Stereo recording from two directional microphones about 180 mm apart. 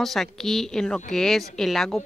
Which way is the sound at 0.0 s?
Centre (ahead or behind).